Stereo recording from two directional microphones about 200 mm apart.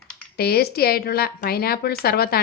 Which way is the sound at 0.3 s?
50° left (ahead or behind).